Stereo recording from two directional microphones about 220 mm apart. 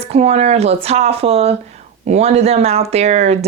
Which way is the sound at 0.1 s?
30° right (ahead or behind).